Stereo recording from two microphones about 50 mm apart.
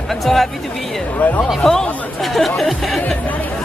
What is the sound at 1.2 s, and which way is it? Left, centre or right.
Speech, left.